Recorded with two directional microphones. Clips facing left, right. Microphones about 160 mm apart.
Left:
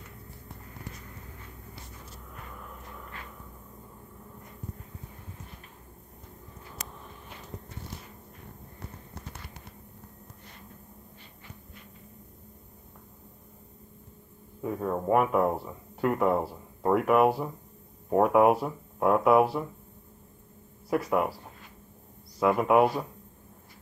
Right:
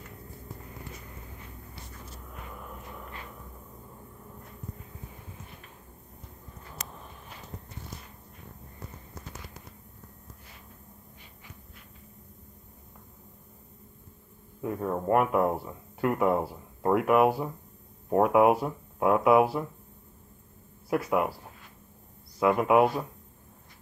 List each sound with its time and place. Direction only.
8.7 s walk: 60° left (ahead or behind)
14.6 s speech: centre (ahead or behind)
20.9 s speech: centre (ahead or behind)
22.4 s speech: centre (ahead or behind)